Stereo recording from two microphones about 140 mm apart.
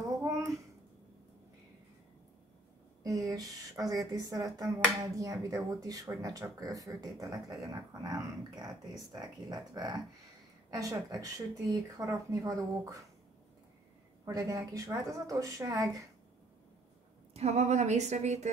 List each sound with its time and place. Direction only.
3.0 s a sound: 25° right (ahead or behind)
3.9 s speech: 25° right (ahead or behind)
14.2 s speech: 25° right (ahead or behind)
17.3 s a woman's voice: 50° right (ahead or behind)